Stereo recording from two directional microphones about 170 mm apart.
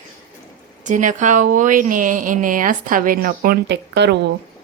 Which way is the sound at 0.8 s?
50° right (ahead or behind).